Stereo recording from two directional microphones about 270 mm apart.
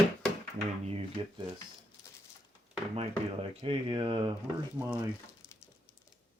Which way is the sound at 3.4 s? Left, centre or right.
Centre.